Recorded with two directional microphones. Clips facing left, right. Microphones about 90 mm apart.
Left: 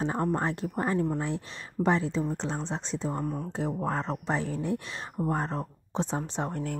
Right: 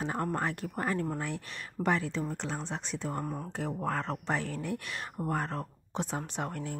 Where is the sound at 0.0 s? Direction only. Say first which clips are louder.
Left 4 dB; 20° left (ahead or behind).